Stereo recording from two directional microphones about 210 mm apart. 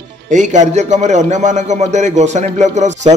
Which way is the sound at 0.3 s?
35° right (ahead or behind).